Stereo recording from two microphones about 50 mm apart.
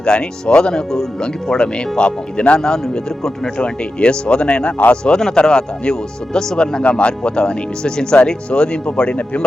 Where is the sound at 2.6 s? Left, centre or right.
Centre.